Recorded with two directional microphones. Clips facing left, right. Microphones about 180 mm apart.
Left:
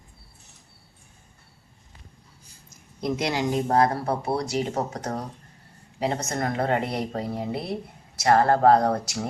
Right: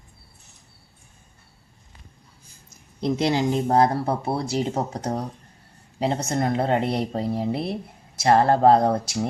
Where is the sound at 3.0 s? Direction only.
30° right (ahead or behind).